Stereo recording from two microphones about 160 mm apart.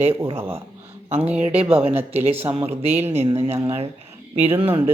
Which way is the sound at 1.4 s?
40° right (ahead or behind).